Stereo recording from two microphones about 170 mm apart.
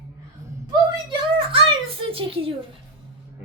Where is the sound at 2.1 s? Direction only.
35° right (ahead or behind).